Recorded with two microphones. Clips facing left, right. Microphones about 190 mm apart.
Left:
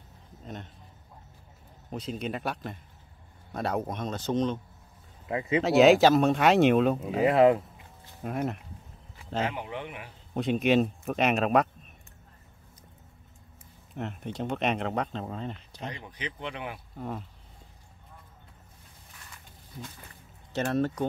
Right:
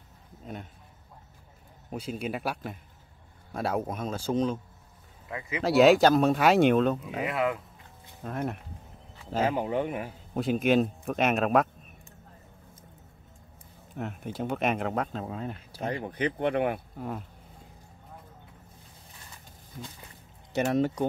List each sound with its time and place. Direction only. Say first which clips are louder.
1.9 s speech: even; 10° right (ahead or behind)
5.3 s speech: left 8 dB; 30° left (ahead or behind)
5.6 s speech: even; centre (ahead or behind)
7.2 s speech: left 8 dB; 35° left (ahead or behind)
8.2 s speech: left 2 dB; 10° left (ahead or behind)
9.5 s speech: right 8 dB; 40° right (ahead or behind)
10.3 s speech: even; centre (ahead or behind)
13.9 s speech: even; 5° right (ahead or behind)
15.8 s speech: right 9 dB; 55° right (ahead or behind)
20.5 s speech: right 2 dB; 15° right (ahead or behind)